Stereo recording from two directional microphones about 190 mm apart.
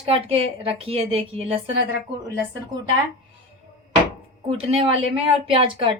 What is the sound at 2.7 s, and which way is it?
Speech, 45° right (ahead or behind).